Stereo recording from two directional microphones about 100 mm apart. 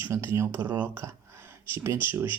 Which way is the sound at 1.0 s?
25° right (ahead or behind).